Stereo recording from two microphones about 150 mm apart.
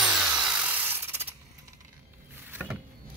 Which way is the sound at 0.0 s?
5° right (ahead or behind).